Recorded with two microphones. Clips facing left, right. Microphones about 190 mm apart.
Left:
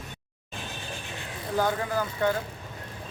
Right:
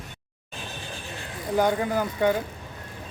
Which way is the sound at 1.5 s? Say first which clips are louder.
Right 4 dB; 20° right (ahead or behind).